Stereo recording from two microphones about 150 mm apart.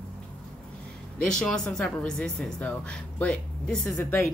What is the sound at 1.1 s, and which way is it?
A woman's voice, 5° left (ahead or behind).